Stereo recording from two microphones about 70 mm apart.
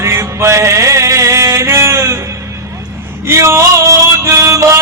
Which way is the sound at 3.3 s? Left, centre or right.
Right.